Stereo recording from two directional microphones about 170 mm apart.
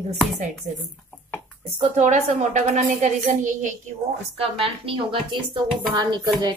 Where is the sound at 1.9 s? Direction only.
45° right (ahead or behind); by 5.4 s 30° right (ahead or behind).